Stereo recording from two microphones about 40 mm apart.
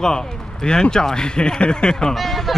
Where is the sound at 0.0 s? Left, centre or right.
Centre.